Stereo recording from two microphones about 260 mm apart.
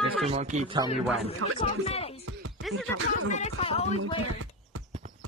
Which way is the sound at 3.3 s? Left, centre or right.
Left.